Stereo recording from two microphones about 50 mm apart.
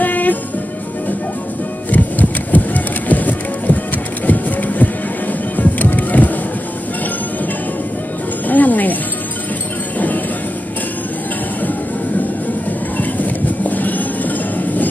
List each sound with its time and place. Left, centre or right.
0.0 s music: left
1.9 s music: left
8.5 s music: left
9.9 s music: left
12.9 s a sound: left